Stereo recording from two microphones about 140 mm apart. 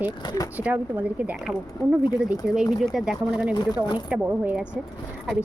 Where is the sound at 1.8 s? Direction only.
25° left (ahead or behind).